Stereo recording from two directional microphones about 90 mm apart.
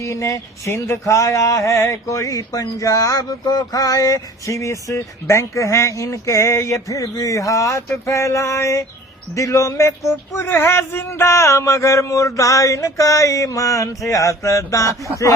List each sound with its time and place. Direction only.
0.0 s speech: 35° left (ahead or behind)